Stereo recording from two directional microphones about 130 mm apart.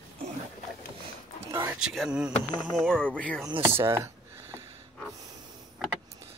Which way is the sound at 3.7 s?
20° right (ahead or behind).